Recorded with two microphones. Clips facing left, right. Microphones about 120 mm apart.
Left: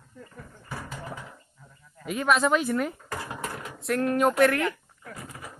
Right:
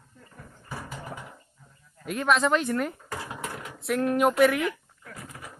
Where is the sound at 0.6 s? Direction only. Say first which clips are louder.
Even; 5° right (ahead or behind).